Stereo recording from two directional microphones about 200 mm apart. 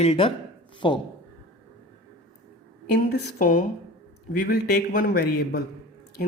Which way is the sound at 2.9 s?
55° left (ahead or behind).